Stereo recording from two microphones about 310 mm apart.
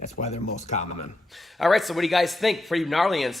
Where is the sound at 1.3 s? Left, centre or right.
Centre.